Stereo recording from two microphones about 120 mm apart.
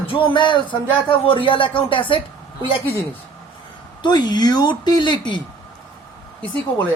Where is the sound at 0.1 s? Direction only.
45° left (ahead or behind).